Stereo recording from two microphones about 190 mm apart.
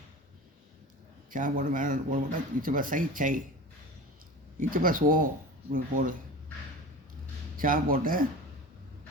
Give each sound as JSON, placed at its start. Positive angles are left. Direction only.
{"t": 1.3, "sound": "speech", "side_deg": -45}
{"t": 4.7, "sound": "speech", "side_deg": -45}
{"t": 7.5, "sound": "speech", "side_deg": -45}